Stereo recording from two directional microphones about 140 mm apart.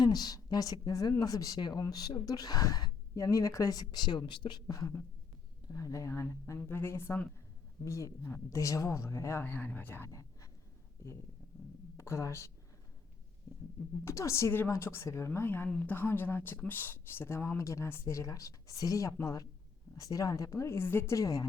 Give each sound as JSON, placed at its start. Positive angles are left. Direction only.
{"t": 0.0, "sound": "a woman's voice", "side_deg": 30}
{"t": 11.9, "sound": "speech", "side_deg": 20}
{"t": 14.0, "sound": "a woman's voice", "side_deg": 20}